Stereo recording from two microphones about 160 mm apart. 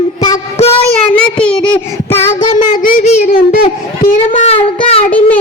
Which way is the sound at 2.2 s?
50° left (ahead or behind).